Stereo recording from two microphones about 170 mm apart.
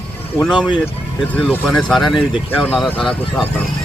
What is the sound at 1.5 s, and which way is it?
Speech, 5° left (ahead or behind).